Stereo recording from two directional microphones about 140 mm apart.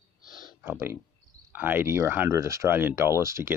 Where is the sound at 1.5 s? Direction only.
15° right (ahead or behind).